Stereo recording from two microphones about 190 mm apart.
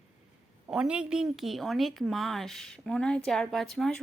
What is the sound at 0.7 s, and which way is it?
A woman's voice, 5° right (ahead or behind).